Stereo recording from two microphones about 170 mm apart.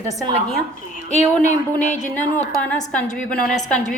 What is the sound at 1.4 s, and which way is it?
Speech, 45° left (ahead or behind).